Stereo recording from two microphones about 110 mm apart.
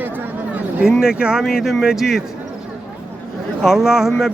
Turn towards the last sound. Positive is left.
turn(degrees=0)  # may be behind; listen again after turning